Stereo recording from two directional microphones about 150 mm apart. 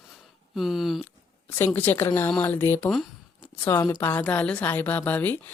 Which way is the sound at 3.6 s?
25° left (ahead or behind).